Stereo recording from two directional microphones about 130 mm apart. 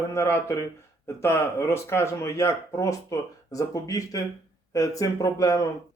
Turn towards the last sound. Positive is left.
turn(degrees=25)  # may be behind; listen again after turning